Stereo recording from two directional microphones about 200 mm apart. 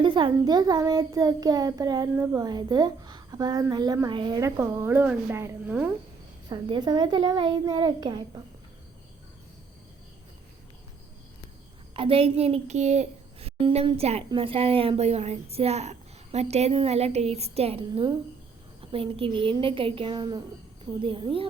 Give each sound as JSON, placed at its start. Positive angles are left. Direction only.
{"t": 0.0, "sound": "a child's voice", "side_deg": -25}
{"t": 6.5, "sound": "a child's voice", "side_deg": -20}
{"t": 11.9, "sound": "a child's voice", "side_deg": -25}